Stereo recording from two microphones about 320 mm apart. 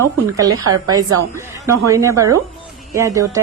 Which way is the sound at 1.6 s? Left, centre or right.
Centre.